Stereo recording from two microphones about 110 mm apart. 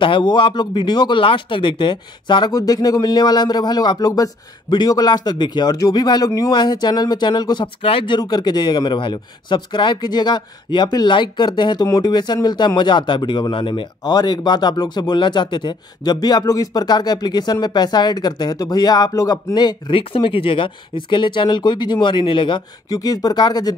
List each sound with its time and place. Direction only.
0.0 s speech: 45° left (ahead or behind)
7.6 s speech: 55° left (ahead or behind)
22.8 s speech: 35° left (ahead or behind)